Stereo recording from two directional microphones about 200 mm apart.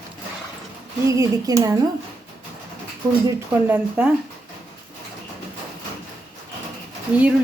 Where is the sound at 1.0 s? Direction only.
15° right (ahead or behind).